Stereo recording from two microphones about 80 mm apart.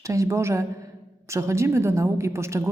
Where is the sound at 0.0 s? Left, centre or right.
Right.